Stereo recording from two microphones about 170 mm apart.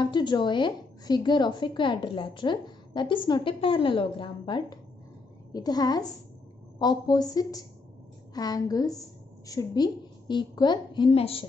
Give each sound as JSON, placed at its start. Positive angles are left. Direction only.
{"t": 0.0, "sound": "a woman's voice", "side_deg": 25}